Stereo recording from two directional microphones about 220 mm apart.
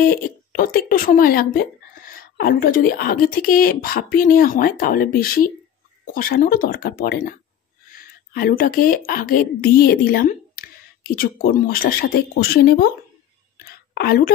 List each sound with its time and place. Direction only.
0.0 s a woman's voice: 40° left (ahead or behind)
13.9 s speech: 45° left (ahead or behind)